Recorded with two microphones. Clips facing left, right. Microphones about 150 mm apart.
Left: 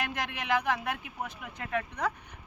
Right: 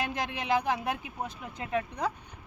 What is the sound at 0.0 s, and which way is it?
Speech, 30° right (ahead or behind).